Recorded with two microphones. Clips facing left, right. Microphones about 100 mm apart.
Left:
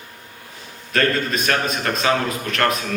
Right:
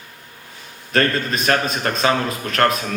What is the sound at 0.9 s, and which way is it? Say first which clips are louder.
Speech: right 1 dB; 35° right (ahead or behind).